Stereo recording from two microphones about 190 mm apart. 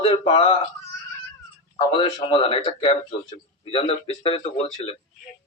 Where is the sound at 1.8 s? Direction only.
25° left (ahead or behind).